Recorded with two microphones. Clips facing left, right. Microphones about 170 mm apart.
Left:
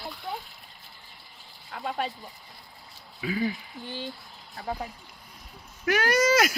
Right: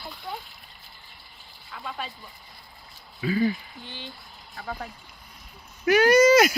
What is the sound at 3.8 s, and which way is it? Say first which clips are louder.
Speech: left 7 dB; 40° left (ahead or behind).